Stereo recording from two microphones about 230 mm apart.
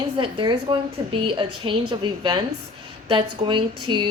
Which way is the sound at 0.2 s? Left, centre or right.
Right.